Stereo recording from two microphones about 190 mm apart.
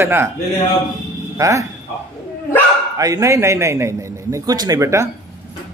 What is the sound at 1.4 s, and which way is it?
Speech, 15° right (ahead or behind).